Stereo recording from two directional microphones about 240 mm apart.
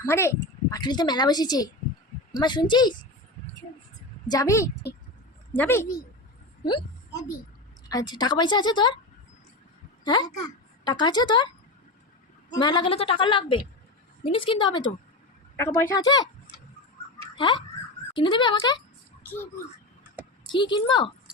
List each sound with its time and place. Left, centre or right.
0.0 s a child's voice: centre
4.3 s a child's voice: centre
6.7 s a sound: centre
7.9 s a child's voice: centre
10.0 s a woman's voice: centre
15.5 s a child's voice: centre
17.3 s a woman's voice: centre
20.5 s a woman's voice: centre